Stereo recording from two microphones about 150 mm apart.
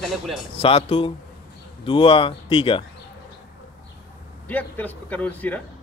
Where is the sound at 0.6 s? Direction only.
40° left (ahead or behind).